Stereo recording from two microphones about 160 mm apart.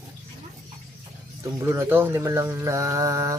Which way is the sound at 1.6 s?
15° right (ahead or behind).